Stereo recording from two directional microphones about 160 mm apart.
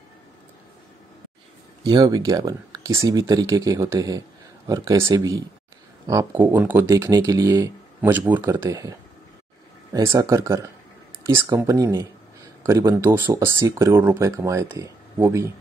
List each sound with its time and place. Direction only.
1.9 s speech: 25° right (ahead or behind)
9.9 s speech: 20° right (ahead or behind)